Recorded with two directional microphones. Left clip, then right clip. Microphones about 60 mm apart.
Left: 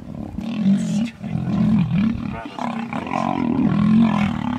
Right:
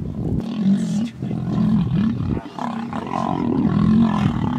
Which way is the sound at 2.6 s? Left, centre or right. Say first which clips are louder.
Left 3 dB; centre.